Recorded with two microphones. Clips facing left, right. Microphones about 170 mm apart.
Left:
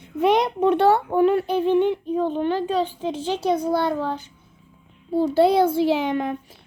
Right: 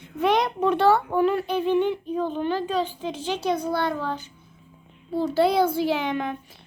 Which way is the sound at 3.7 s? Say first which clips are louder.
Left 4 dB; 5° left (ahead or behind).